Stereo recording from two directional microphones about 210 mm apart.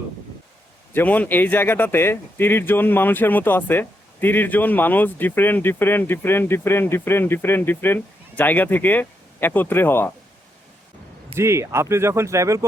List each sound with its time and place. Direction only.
0.9 s speech: 5° left (ahead or behind)
11.3 s speech: 15° right (ahead or behind)